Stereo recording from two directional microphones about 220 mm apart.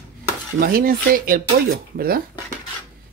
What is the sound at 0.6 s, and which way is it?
Speech, 40° right (ahead or behind).